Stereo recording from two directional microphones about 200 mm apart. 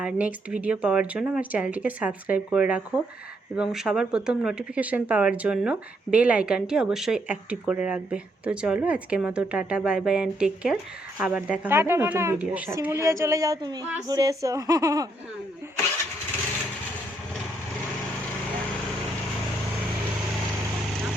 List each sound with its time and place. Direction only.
0.0 s speech: 5° right (ahead or behind)